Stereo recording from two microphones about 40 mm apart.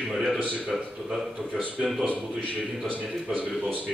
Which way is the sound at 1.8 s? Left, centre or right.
Centre.